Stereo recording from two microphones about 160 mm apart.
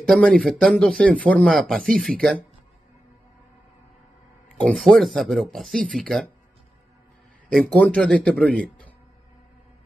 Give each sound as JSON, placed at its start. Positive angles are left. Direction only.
{"t": 0.0, "sound": "speech", "side_deg": 5}
{"t": 4.6, "sound": "speech", "side_deg": 5}
{"t": 7.5, "sound": "a man's voice", "side_deg": 5}